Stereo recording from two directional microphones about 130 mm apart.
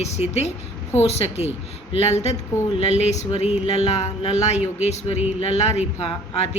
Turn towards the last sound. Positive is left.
turn(degrees=50)  # may be behind; listen again after turning